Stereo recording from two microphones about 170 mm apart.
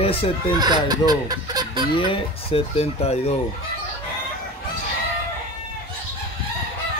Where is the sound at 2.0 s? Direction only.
30° left (ahead or behind).